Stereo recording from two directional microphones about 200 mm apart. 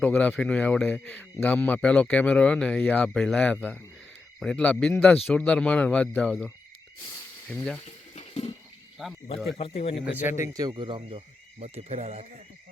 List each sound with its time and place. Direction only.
0.0 s speech: 5° left (ahead or behind)
7.9 s a sound: 35° left (ahead or behind)
9.0 s speech: centre (ahead or behind)
9.5 s speech: 25° left (ahead or behind)
10.1 s a man's voice: 10° right (ahead or behind)
10.5 s speech: 20° right (ahead or behind)